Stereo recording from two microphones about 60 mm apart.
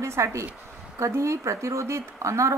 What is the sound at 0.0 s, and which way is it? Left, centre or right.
A woman's voice, right.